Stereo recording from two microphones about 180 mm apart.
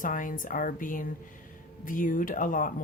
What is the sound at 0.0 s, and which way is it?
Speech, 45° left (ahead or behind).